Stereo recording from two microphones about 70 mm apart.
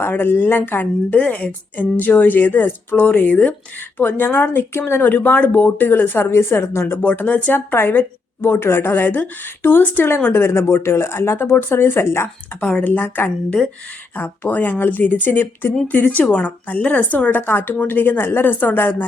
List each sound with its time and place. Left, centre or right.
0.0 s speech: left
7.0 s speech: left
12.8 s speech: left